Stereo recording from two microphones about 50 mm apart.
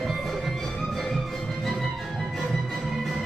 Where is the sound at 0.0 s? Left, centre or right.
Centre.